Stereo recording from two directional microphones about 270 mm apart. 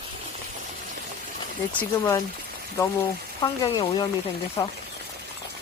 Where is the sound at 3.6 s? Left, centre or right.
Centre.